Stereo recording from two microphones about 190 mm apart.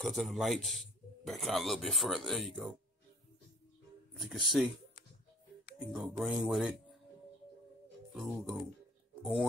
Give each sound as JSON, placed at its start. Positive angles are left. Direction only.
{"t": 0.0, "sound": "a man's voice", "side_deg": 0}
{"t": 4.2, "sound": "a man's voice", "side_deg": 0}
{"t": 5.8, "sound": "a man's voice", "side_deg": 0}
{"t": 8.1, "sound": "a man's voice", "side_deg": 0}